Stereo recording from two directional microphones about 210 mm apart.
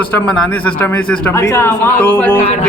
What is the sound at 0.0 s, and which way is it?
A man's voice, 5° left (ahead or behind).